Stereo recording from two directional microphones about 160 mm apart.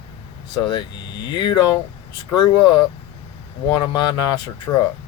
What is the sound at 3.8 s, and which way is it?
Speech, 25° left (ahead or behind).